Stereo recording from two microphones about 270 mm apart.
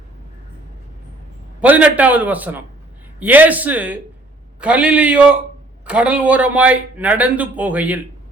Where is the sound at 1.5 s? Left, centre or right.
Centre.